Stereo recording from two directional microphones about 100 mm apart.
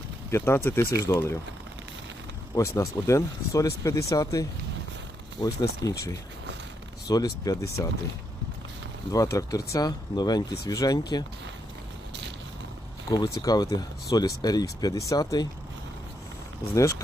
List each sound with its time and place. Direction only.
0.3 s speech: 25° left (ahead or behind)
2.6 s speech: 30° left (ahead or behind)
7.1 s speech: 40° left (ahead or behind)
9.1 s speech: 35° left (ahead or behind)
13.4 s speech: 40° left (ahead or behind)
16.7 s speech: 30° left (ahead or behind)